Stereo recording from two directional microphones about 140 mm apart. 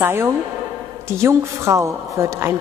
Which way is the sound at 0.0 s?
20° right (ahead or behind).